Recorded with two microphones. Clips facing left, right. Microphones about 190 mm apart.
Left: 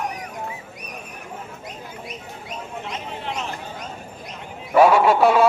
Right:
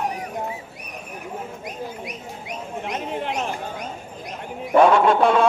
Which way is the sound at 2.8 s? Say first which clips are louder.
Right 8 dB; 55° right (ahead or behind).